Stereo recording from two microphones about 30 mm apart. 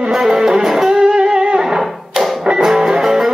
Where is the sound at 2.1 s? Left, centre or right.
Centre.